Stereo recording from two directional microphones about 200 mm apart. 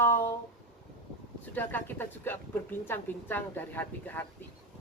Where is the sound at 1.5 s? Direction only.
10° left (ahead or behind).